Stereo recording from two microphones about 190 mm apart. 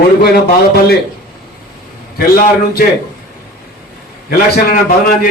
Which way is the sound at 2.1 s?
55° left (ahead or behind).